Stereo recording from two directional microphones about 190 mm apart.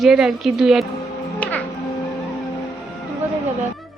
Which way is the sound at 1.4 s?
10° left (ahead or behind).